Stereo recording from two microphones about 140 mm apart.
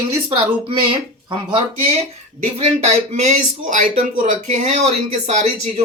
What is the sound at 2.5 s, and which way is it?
Speech, 45° right (ahead or behind).